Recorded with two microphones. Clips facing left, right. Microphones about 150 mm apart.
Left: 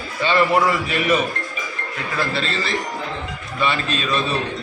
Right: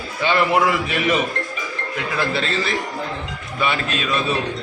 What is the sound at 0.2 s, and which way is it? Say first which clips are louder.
Speech: even; 15° right (ahead or behind).